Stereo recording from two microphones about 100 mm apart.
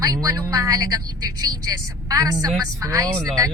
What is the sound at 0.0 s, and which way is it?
A woman's voice, 40° right (ahead or behind).